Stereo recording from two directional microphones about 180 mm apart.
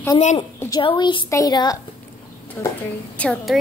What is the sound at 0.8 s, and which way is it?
A woman's voice, 25° left (ahead or behind).